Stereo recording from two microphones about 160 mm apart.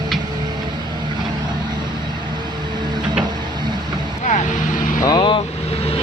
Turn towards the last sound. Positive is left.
turn(degrees=30)  # may be behind; listen again after turning